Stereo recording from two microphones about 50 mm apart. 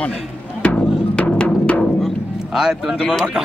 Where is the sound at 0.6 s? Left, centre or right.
Left.